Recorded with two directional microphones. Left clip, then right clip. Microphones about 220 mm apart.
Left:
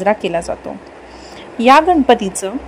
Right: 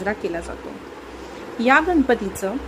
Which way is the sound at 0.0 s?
35° left (ahead or behind).